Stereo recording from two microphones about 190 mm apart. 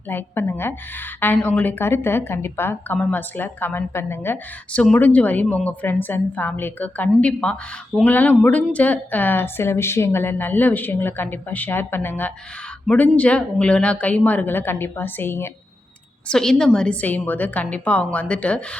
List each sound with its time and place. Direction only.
0.1 s a woman's voice: 10° left (ahead or behind)